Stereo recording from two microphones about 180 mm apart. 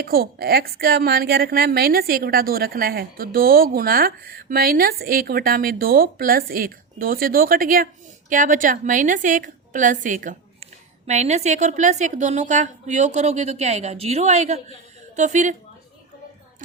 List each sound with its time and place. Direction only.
0.0 s a woman's voice: 55° right (ahead or behind)